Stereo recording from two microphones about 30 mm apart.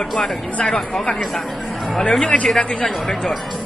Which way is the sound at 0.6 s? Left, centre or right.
Left.